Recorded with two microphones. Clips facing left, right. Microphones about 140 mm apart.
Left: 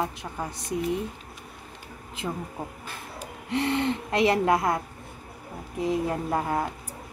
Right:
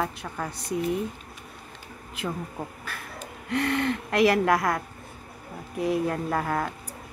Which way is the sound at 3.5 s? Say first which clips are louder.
Even; 25° left (ahead or behind).